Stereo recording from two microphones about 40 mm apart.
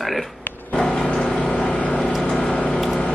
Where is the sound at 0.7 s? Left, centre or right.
Centre.